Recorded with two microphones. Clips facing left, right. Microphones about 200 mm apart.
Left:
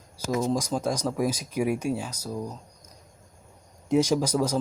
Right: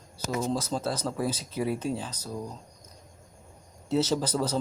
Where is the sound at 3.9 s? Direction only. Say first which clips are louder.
Left 4 dB; 10° left (ahead or behind).